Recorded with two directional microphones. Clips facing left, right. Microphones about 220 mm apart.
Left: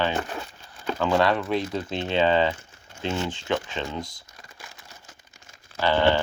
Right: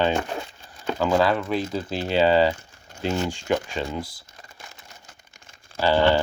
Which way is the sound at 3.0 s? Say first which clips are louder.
Right 3 dB; 40° right (ahead or behind).